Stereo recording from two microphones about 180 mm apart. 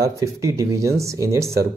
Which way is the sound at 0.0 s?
15° right (ahead or behind).